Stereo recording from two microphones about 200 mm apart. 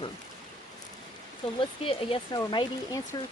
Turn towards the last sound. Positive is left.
turn(degrees=20)  # may be behind; listen again after turning